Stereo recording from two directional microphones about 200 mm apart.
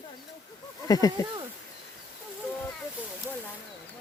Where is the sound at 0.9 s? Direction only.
20° left (ahead or behind).